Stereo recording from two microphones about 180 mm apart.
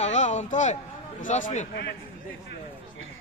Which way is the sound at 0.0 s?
40° left (ahead or behind).